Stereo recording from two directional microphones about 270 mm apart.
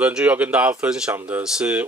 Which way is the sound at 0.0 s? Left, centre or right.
Centre.